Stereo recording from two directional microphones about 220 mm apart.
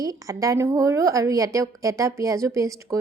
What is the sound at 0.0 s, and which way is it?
A woman's voice, 15° right (ahead or behind).